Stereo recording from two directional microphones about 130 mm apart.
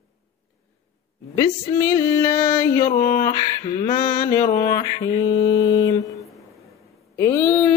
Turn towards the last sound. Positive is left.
turn(degrees=20)  # may be behind; listen again after turning